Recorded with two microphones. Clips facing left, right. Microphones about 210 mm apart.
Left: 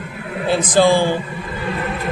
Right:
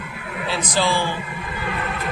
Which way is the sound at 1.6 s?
30° left (ahead or behind).